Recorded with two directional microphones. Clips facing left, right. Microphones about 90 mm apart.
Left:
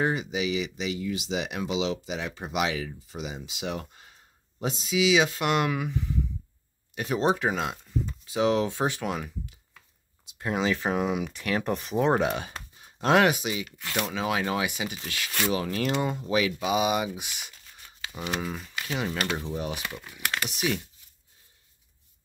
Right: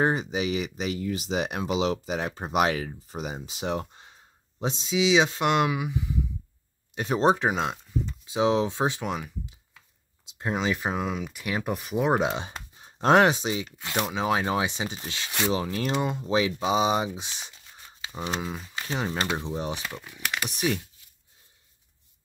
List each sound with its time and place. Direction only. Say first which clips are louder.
0.0 s speech: right 2 dB; 35° right (ahead or behind)
5.6 s speech: right 2 dB; 10° right (ahead or behind)
7.0 s speech: right 3 dB; 35° right (ahead or behind)
9.0 s speech: even; centre (ahead or behind)
10.6 s speech: left 2 dB; 15° right (ahead or behind)
10.9 s speech: left 3 dB; 5° left (ahead or behind)
11.2 s speech: left 2 dB; 15° right (ahead or behind)
11.7 s speech: even; 5° right (ahead or behind)
12.2 s speech: even; 20° right (ahead or behind)
13.7 s speech: right 2 dB; 20° right (ahead or behind)
19.8 s speech: even; centre (ahead or behind)
20.4 s speech: right 3 dB; 35° right (ahead or behind)